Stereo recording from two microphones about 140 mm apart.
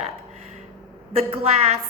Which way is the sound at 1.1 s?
50° right (ahead or behind).